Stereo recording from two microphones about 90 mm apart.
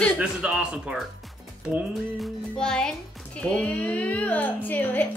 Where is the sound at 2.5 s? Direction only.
10° left (ahead or behind).